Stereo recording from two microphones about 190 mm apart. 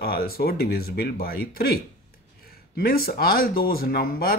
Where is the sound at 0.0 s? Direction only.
55° left (ahead or behind).